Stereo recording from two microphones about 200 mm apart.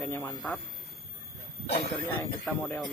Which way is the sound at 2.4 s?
5° left (ahead or behind).